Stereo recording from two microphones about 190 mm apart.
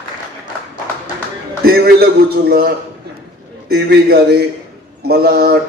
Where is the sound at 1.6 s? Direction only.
55° right (ahead or behind).